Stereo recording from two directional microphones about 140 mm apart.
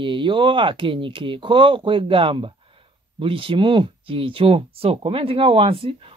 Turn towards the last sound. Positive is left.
turn(degrees=-40)  # may be behind; listen again after turning